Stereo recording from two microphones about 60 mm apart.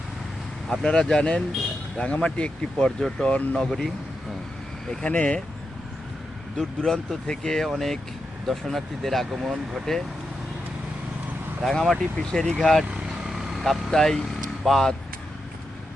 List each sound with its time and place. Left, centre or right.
0.7 s speech: centre
5.0 s speech: left
6.6 s speech: centre
9.3 s speech: centre
11.6 s speech: centre
13.2 s vehicle: centre
13.7 s speech: centre